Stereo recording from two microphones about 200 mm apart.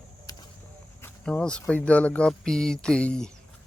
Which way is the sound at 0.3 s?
20° left (ahead or behind).